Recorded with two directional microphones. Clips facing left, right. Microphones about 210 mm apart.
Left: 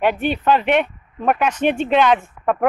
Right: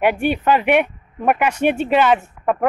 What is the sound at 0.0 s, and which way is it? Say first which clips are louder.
Speech: right 1 dB; 10° right (ahead or behind).